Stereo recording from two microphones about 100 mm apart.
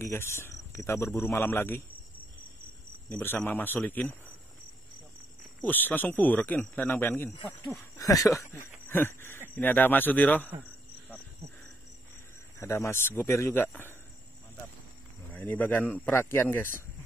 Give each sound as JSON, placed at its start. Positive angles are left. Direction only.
{"t": 0.0, "sound": "a man's voice", "side_deg": 25}
{"t": 3.1, "sound": "a man's voice", "side_deg": 20}
{"t": 5.6, "sound": "a man's voice", "side_deg": 20}
{"t": 8.0, "sound": "speech", "side_deg": 35}
{"t": 8.4, "sound": "a man's voice", "side_deg": 20}
{"t": 12.5, "sound": "a man's voice", "side_deg": 25}
{"t": 15.3, "sound": "a man's voice", "side_deg": 15}